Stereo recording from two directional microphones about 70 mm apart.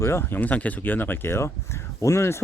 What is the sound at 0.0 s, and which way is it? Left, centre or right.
Speech, left.